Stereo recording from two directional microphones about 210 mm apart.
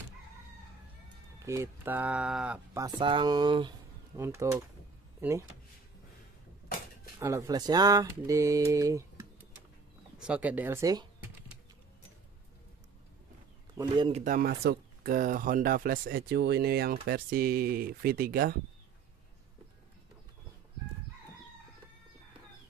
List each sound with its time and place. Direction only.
1.4 s speech: 15° right (ahead or behind)
2.8 s speech: 25° right (ahead or behind)
7.2 s speech: 15° right (ahead or behind)
10.1 s speech: 5° right (ahead or behind)
13.7 s speech: 20° right (ahead or behind)
14.2 s speech: 45° right (ahead or behind)